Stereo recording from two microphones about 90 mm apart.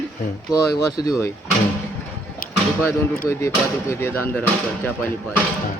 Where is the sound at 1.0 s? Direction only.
45° left (ahead or behind).